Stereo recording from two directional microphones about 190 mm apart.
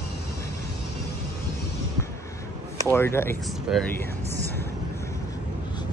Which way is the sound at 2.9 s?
10° left (ahead or behind).